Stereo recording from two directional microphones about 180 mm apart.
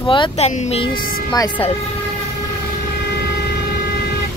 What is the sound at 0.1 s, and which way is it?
Speech, 30° left (ahead or behind).